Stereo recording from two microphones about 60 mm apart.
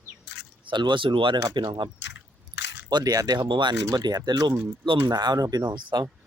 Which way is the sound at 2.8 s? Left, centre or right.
Right.